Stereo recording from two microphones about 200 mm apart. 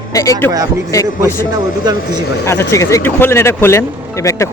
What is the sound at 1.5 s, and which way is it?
Speech, 20° right (ahead or behind).